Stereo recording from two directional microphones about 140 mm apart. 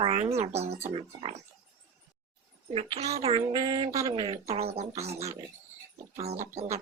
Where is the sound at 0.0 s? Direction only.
45° right (ahead or behind).